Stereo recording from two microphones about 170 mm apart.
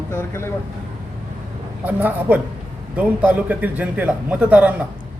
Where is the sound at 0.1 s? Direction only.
15° left (ahead or behind).